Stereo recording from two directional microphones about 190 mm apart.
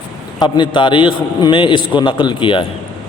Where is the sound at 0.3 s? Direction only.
25° left (ahead or behind).